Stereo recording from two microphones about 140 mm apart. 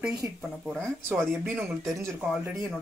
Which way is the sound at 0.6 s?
5° left (ahead or behind).